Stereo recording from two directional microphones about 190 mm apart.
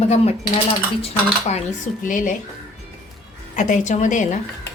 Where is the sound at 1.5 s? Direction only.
40° left (ahead or behind).